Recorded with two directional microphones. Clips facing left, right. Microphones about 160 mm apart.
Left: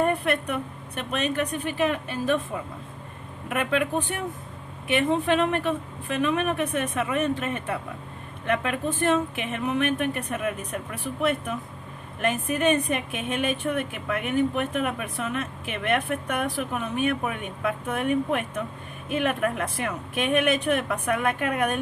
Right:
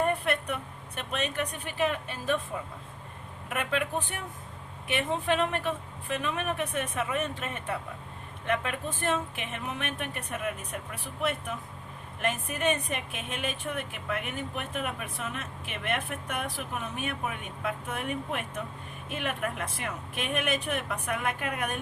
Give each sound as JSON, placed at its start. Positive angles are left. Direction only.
{"t": 0.0, "sound": "a woman's voice", "side_deg": 60}
{"t": 3.5, "sound": "a woman's voice", "side_deg": 65}
{"t": 12.2, "sound": "a woman's voice", "side_deg": 65}